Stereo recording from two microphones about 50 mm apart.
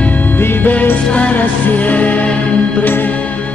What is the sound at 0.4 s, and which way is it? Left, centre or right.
Music, left.